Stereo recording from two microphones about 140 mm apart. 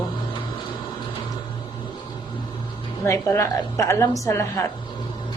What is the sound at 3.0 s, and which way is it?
A woman's voice, 20° left (ahead or behind).